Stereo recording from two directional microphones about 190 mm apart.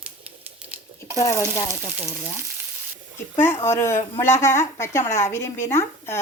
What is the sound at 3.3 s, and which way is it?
A woman's voice, 15° left (ahead or behind).